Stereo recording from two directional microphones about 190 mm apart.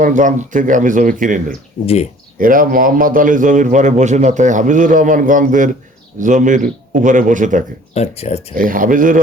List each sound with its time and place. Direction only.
0.0 s a man's voice: 40° right (ahead or behind)
7.9 s speech: 35° left (ahead or behind)
8.5 s a man's voice: 45° right (ahead or behind)